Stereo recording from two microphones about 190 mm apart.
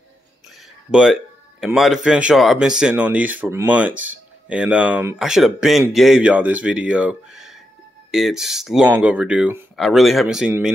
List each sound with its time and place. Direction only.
0.9 s speech: 5° right (ahead or behind)